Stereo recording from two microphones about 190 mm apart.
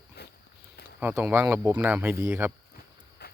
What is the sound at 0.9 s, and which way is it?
Speech, 10° right (ahead or behind).